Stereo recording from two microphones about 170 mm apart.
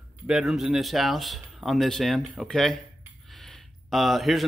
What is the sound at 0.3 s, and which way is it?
Speech, 5° right (ahead or behind).